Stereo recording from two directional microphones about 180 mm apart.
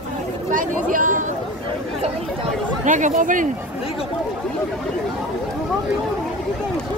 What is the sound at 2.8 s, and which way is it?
Speech, 45° right (ahead or behind).